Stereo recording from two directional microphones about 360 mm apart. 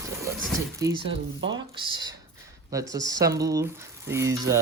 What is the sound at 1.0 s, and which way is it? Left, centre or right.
Speech, right.